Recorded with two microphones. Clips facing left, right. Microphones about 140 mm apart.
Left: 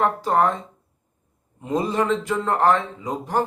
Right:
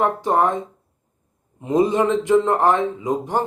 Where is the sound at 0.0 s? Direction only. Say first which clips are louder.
Right 1 dB; 20° right (ahead or behind).